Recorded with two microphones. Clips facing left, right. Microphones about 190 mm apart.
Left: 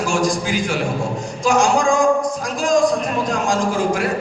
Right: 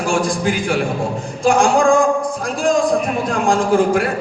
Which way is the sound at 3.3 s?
55° right (ahead or behind).